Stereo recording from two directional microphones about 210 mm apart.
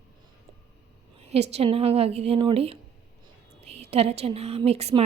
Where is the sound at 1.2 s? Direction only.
30° right (ahead or behind).